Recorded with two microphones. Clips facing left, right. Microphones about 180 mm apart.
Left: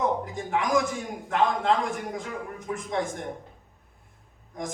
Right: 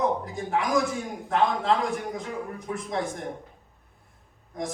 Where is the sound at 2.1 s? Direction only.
35° right (ahead or behind).